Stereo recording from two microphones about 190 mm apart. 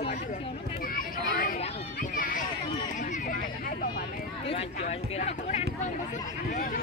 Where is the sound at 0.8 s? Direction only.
45° left (ahead or behind).